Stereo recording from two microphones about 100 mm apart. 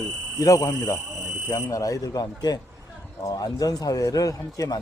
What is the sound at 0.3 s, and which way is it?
Speech, 35° left (ahead or behind).